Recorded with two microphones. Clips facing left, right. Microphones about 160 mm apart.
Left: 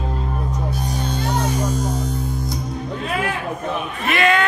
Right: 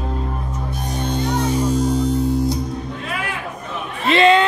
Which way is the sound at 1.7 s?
30° right (ahead or behind).